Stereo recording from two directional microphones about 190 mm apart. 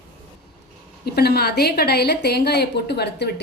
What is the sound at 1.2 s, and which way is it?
A woman's voice, 55° left (ahead or behind).